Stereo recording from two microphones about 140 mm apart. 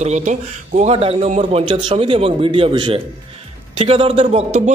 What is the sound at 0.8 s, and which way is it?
Speech, 45° right (ahead or behind).